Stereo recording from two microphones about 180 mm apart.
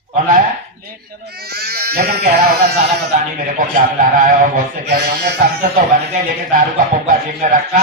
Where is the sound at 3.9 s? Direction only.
50° right (ahead or behind).